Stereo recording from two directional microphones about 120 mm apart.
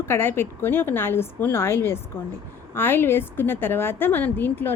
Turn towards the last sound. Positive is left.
turn(degrees=15)  # may be behind; listen again after turning